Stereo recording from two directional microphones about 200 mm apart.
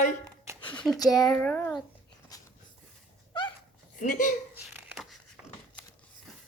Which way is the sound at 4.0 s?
40° left (ahead or behind).